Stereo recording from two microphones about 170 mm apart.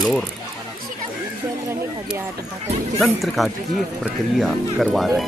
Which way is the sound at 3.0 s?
Centre (ahead or behind).